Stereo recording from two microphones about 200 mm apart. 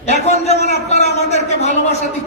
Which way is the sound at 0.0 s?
35° left (ahead or behind).